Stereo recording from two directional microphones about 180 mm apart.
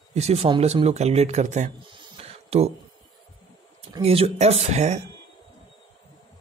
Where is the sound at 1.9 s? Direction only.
35° right (ahead or behind).